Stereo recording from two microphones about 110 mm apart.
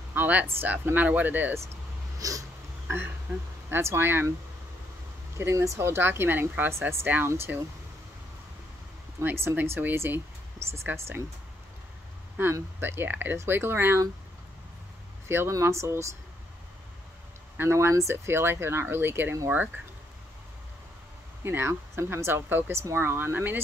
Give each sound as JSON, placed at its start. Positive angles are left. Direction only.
{"t": 0.1, "sound": "speech", "side_deg": -15}
{"t": 2.1, "sound": "a sound", "side_deg": -30}
{"t": 3.7, "sound": "a woman's voice", "side_deg": -20}
{"t": 5.4, "sound": "a woman's voice", "side_deg": -25}
{"t": 9.2, "sound": "a woman's voice", "side_deg": -20}
{"t": 12.4, "sound": "a woman's voice", "side_deg": -20}
{"t": 15.2, "sound": "a woman's voice", "side_deg": -25}
{"t": 17.6, "sound": "a woman's voice", "side_deg": -25}
{"t": 21.5, "sound": "a woman's voice", "side_deg": -20}